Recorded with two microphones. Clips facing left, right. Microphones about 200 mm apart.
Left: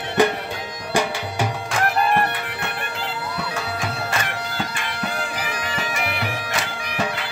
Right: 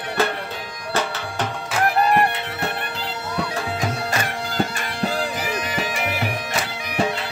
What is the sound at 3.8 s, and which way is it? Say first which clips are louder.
Music: right 2 dB; 40° right (ahead or behind).